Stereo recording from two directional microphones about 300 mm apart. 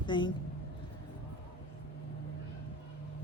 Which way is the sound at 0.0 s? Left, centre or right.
Centre.